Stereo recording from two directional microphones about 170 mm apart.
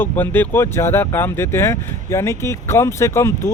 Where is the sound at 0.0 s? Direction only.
10° left (ahead or behind).